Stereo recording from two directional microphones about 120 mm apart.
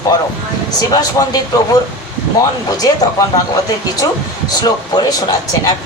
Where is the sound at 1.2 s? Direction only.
30° left (ahead or behind).